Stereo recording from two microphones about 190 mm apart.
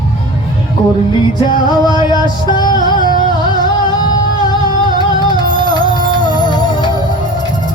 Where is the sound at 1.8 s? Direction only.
20° left (ahead or behind).